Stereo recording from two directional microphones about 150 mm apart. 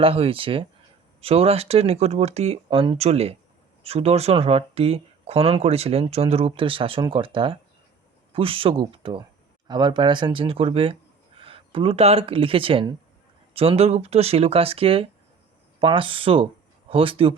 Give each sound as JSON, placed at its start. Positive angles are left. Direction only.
{"t": 0.0, "sound": "speech", "side_deg": -40}
{"t": 3.0, "sound": "speech", "side_deg": -45}